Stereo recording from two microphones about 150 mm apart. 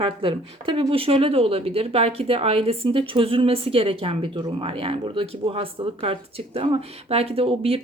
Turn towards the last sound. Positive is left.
turn(degrees=-40)  # may be behind; listen again after turning